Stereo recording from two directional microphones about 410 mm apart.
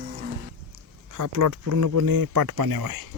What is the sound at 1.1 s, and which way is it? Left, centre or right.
Speech, right.